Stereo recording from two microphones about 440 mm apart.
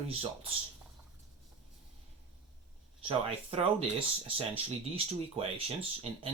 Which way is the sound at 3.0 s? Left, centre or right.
Centre.